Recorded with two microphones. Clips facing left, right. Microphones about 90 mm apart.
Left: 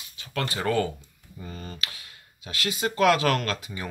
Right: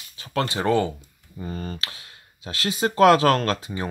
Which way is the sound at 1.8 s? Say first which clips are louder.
Right 2 dB; 30° right (ahead or behind).